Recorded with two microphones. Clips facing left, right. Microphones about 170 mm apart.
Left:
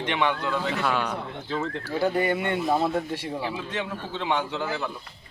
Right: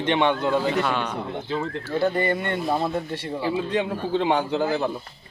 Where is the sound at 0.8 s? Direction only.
5° left (ahead or behind).